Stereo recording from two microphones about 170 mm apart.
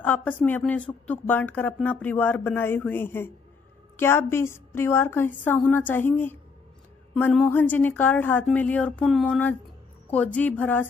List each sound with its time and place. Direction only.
0.0 s a woman's voice: 10° left (ahead or behind)
7.3 s a woman's voice: 10° left (ahead or behind)